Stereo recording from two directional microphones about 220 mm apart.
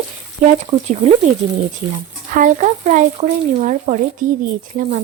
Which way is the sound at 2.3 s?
35° right (ahead or behind).